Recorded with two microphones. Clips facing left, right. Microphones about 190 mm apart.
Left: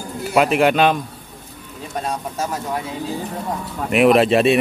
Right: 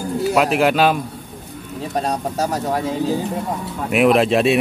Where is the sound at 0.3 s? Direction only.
Centre (ahead or behind).